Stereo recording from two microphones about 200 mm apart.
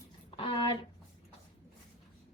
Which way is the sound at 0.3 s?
25° left (ahead or behind).